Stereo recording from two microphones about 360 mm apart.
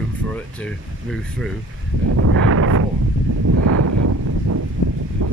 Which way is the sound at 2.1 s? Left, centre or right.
Right.